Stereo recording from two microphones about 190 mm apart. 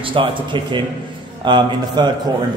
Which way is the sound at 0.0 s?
25° right (ahead or behind).